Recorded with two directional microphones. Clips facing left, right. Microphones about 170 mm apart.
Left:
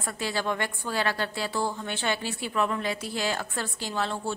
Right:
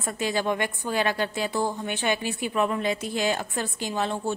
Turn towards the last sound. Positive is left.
turn(degrees=-20)  # may be behind; listen again after turning